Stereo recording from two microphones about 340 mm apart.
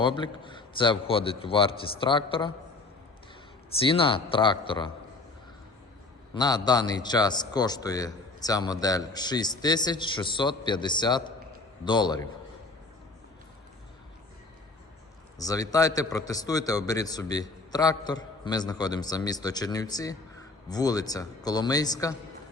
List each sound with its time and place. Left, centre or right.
0.0 s a man's voice: centre
3.8 s a man's voice: centre
6.3 s a man's voice: centre
15.4 s a man's voice: centre